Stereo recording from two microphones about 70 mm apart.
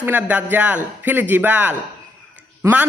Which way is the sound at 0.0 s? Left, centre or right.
Right.